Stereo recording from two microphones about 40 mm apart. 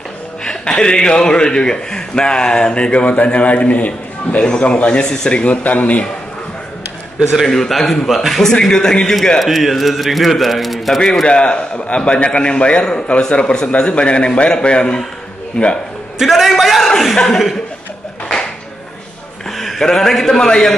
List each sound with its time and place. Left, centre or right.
0.5 s a man's voice: left
7.4 s a man's voice: centre
8.4 s a man's voice: centre
9.4 s a man's voice: centre
11.2 s a man's voice: left
16.2 s a man's voice: centre
19.5 s a sound: centre
19.8 s a man's voice: centre